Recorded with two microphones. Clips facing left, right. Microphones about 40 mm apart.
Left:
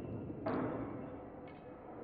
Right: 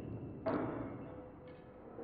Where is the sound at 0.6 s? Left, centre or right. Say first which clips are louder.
Left 1 dB; centre.